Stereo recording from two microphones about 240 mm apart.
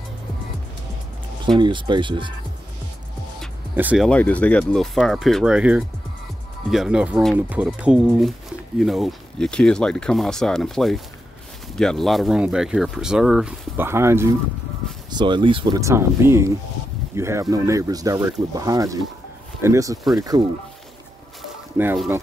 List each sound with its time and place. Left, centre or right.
1.6 s speech: centre
3.7 s speech: centre
20.0 s speech: centre
21.4 s a sound: centre